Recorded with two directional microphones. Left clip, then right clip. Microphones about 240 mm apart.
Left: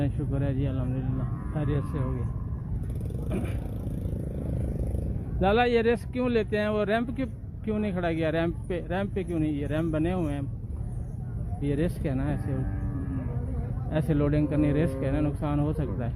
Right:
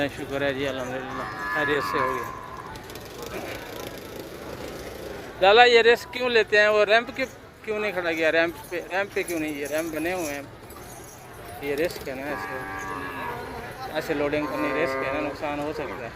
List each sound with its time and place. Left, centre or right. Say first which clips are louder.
0.0 s speech: right 7 dB; centre
5.4 s speech: right 8 dB; centre
11.6 s speech: right 3 dB; centre
13.9 s cattle: right 2 dB; centre